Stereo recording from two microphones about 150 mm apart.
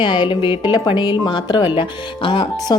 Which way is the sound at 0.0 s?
30° left (ahead or behind).